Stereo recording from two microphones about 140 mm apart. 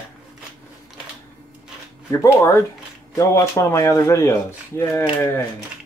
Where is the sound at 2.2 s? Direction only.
20° left (ahead or behind).